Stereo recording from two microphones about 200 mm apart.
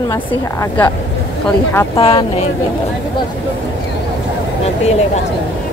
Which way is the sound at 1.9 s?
25° left (ahead or behind).